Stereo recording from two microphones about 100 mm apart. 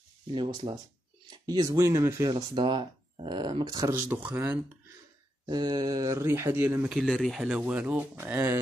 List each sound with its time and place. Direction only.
0.3 s speech: 50° right (ahead or behind); by 2.4 s 30° right (ahead or behind)
2.5 s speech: 50° right (ahead or behind)
3.9 s speech: 15° right (ahead or behind)
5.5 s speech: 45° right (ahead or behind); by 6.8 s 25° right (ahead or behind)
6.8 s speech: centre (ahead or behind)
7.4 s speech: 10° right (ahead or behind)